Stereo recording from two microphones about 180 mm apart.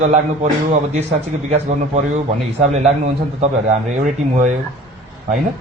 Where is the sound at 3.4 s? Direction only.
45° right (ahead or behind).